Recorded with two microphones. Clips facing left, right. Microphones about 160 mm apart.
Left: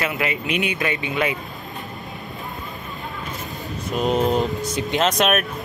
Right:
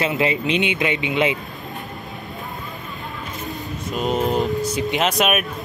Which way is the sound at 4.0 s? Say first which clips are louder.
Left 1 dB; centre (ahead or behind).